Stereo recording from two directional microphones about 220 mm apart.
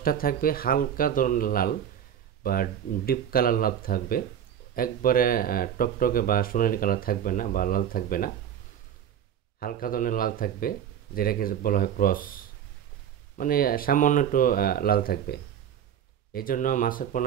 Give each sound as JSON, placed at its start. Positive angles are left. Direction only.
{"t": 0.0, "sound": "speech", "side_deg": 40}
{"t": 9.6, "sound": "speech", "side_deg": 40}